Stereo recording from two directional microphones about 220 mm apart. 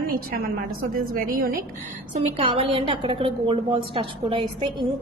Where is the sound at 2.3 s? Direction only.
25° right (ahead or behind).